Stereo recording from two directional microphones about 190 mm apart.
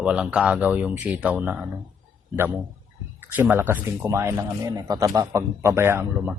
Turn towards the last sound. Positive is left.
turn(degrees=-10)  # may be behind; listen again after turning